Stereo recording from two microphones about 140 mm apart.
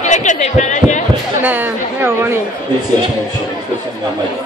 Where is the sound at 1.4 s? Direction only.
15° right (ahead or behind).